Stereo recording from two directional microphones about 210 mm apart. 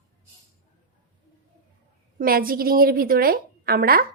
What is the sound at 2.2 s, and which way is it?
A woman's voice, 45° right (ahead or behind).